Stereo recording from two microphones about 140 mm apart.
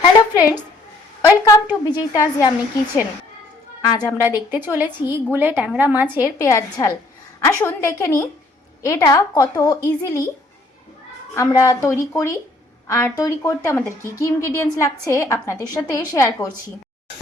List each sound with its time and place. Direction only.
1.2 s a woman's voice: 25° left (ahead or behind)
3.8 s a woman's voice: 25° left (ahead or behind)
4.9 s a woman's voice: 15° right (ahead or behind)
6.1 s a woman's voice: 25° left (ahead or behind)
11.3 s a woman's voice: 25° left (ahead or behind)